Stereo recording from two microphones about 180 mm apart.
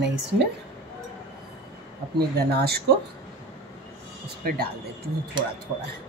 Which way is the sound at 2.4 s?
65° right (ahead or behind).